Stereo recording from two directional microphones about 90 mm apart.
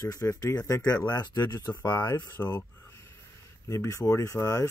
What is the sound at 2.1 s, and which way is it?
Speech, 25° left (ahead or behind).